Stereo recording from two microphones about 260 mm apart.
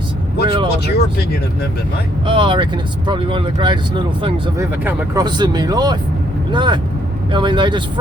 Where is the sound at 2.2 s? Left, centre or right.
Centre.